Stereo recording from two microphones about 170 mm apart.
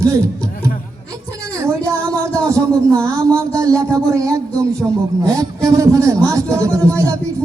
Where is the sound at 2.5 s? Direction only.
20° right (ahead or behind).